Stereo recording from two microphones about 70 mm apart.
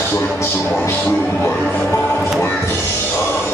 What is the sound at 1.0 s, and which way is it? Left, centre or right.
Music, left.